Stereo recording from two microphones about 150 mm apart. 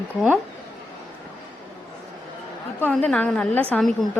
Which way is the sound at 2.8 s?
10° left (ahead or behind).